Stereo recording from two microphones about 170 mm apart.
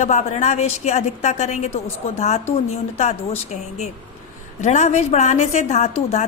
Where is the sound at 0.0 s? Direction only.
45° left (ahead or behind).